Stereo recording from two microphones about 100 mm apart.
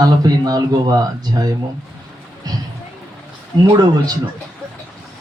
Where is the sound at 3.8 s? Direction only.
40° right (ahead or behind).